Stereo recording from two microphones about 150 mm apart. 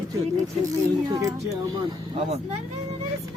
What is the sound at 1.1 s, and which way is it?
Speech, 25° right (ahead or behind).